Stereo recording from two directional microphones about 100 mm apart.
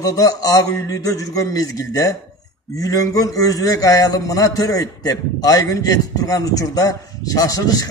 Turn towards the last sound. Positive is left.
turn(degrees=35)  # may be behind; listen again after turning